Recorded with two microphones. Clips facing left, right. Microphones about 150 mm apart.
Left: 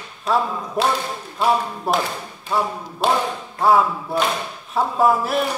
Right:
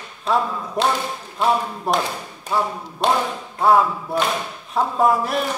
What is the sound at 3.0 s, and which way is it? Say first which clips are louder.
Tap: even; 5° left (ahead or behind).